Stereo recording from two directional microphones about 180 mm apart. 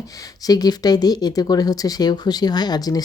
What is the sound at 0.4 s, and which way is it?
Speech, 20° left (ahead or behind).